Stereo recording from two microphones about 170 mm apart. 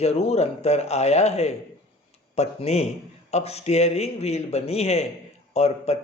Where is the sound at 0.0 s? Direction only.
35° left (ahead or behind).